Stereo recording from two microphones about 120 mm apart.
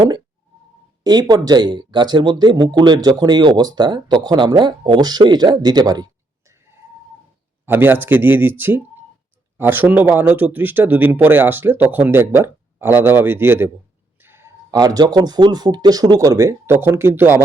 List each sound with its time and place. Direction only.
1.0 s speech: 35° right (ahead or behind)
7.6 s speech: 15° right (ahead or behind)
14.2 s a sound: 20° right (ahead or behind)
14.7 s speech: 35° right (ahead or behind)